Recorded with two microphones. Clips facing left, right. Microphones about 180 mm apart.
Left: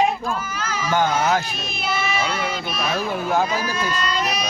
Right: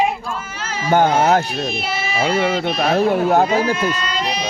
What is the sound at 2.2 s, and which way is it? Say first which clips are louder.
Speech: right 8 dB; 75° right (ahead or behind).